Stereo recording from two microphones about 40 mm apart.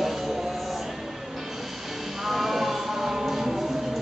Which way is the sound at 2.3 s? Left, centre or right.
Centre.